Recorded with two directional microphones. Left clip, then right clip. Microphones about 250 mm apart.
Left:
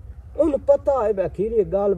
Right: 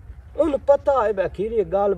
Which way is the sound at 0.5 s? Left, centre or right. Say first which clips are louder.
Right 1 dB; right.